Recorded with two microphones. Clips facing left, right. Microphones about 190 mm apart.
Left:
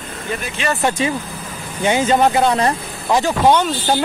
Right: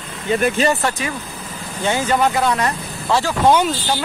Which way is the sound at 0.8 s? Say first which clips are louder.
Left 4 dB; 25° left (ahead or behind).